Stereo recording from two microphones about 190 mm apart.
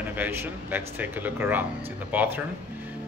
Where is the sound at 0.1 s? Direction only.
10° right (ahead or behind).